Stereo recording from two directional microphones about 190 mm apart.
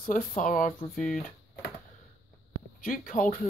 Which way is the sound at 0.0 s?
45° left (ahead or behind).